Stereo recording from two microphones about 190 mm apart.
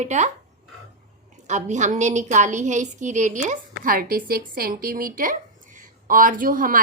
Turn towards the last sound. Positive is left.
turn(degrees=-45)  # may be behind; listen again after turning